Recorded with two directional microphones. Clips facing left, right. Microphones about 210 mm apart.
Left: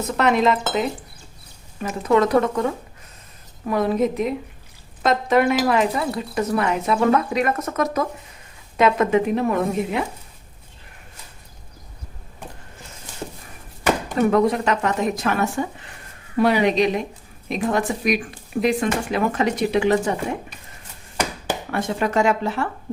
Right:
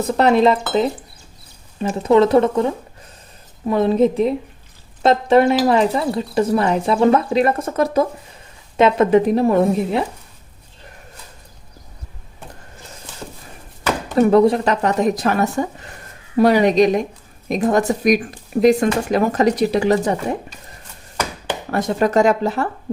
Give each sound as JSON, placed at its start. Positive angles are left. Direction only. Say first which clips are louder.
{"t": 0.0, "sound": "speech", "louder": "right 5 dB", "side_deg": -35}
{"t": 1.8, "sound": "a woman's voice", "louder": "right 5 dB", "side_deg": -25}
{"t": 3.7, "sound": "a woman's voice", "louder": "right 5 dB", "side_deg": -25}
{"t": 14.2, "sound": "speech", "louder": "right 6 dB", "side_deg": -35}
{"t": 21.7, "sound": "speech", "louder": "right 6 dB", "side_deg": -40}